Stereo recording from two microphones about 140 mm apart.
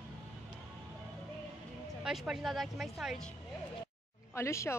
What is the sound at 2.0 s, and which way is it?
Speech, 5° right (ahead or behind).